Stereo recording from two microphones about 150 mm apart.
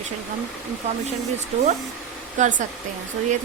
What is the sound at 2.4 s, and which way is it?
Speech, 60° right (ahead or behind).